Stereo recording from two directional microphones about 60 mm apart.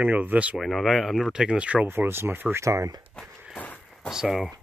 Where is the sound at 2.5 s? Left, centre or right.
Right.